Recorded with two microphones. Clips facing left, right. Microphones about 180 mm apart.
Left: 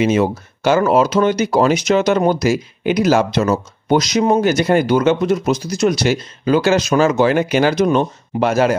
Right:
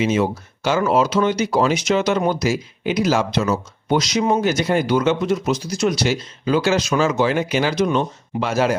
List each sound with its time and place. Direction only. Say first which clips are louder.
0.0 s speech: left 4 dB; 55° left (ahead or behind)